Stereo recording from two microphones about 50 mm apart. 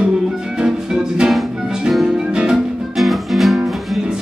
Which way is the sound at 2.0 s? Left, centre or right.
Centre.